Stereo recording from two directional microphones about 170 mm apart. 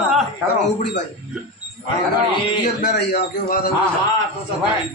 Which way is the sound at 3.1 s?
55° left (ahead or behind).